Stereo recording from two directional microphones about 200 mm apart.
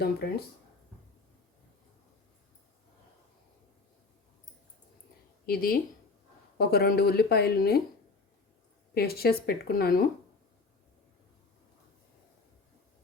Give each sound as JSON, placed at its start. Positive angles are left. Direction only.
{"t": 0.2, "sound": "speech", "side_deg": 55}
{"t": 5.5, "sound": "speech", "side_deg": 45}
{"t": 9.0, "sound": "speech", "side_deg": 50}